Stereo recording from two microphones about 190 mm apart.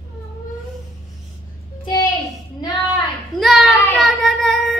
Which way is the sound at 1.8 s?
20° left (ahead or behind).